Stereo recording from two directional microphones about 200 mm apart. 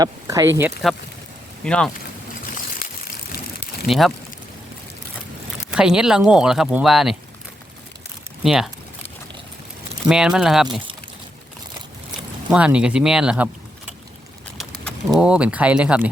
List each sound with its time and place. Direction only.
0.0 s speech: 15° right (ahead or behind)
1.6 s speech: 5° left (ahead or behind)
3.8 s speech: centre (ahead or behind)
5.7 s speech: 5° right (ahead or behind)
8.4 s speech: centre (ahead or behind)
10.1 s speech: 5° right (ahead or behind)
12.5 s speech: 5° right (ahead or behind)
15.2 s speech: 5° right (ahead or behind)